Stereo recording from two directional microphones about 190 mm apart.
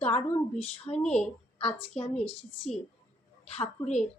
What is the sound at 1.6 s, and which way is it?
Speech, 30° left (ahead or behind).